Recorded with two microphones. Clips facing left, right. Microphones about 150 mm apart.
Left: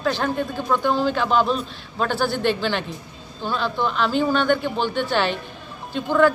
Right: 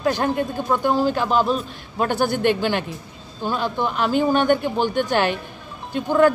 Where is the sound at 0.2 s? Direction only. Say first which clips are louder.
Right 2 dB; 15° right (ahead or behind).